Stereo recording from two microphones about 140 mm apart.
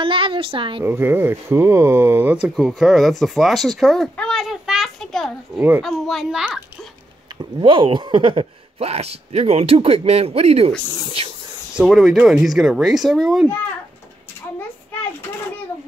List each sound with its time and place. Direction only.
0.0 s a sound: 40° right (ahead or behind)
0.8 s speech: 15° right (ahead or behind)
7.6 s speech: 35° right (ahead or behind)
11.7 s speech: 5° right (ahead or behind)